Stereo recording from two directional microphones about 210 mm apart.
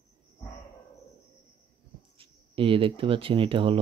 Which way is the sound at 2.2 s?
25° right (ahead or behind).